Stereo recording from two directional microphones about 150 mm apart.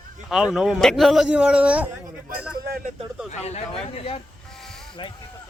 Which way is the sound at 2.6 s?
90° right.